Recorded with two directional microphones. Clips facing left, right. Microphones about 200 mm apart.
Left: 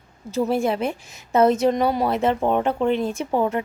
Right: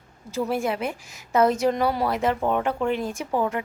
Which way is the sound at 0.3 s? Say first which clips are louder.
Left 4 dB; 25° left (ahead or behind).